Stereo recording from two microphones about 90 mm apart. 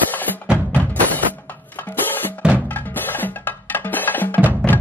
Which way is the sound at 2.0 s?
20° left (ahead or behind).